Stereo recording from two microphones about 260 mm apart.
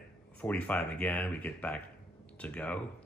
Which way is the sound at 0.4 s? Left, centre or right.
Centre.